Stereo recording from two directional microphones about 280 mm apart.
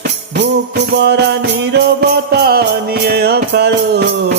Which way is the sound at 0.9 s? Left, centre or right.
Right.